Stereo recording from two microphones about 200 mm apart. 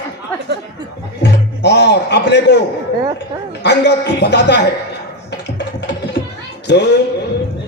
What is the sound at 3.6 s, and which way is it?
A man's voice, 60° left (ahead or behind).